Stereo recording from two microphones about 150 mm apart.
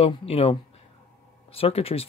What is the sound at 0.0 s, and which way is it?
Speech, 40° left (ahead or behind).